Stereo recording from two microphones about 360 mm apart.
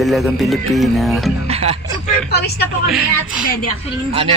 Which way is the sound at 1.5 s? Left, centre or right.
Centre.